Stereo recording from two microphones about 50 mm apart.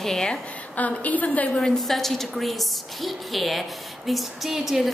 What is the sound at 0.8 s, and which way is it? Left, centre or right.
Speech, left.